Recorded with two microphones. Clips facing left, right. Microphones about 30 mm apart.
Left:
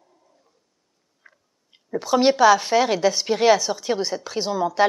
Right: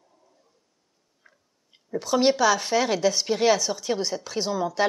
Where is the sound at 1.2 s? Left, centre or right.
Centre.